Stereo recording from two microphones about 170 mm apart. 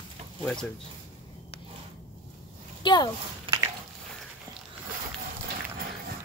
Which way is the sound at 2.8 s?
25° left (ahead or behind).